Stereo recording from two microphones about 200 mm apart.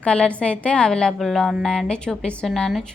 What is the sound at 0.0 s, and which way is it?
A woman's voice, 5° left (ahead or behind).